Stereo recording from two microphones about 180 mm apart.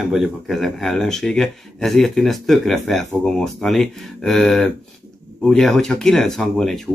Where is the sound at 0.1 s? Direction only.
Centre (ahead or behind).